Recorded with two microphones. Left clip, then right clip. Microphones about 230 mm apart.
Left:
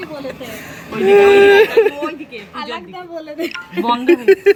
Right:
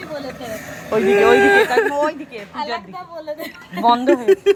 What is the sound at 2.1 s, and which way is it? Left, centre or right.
Speech, centre.